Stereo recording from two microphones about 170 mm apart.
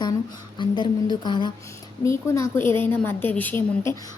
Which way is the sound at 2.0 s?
15° left (ahead or behind).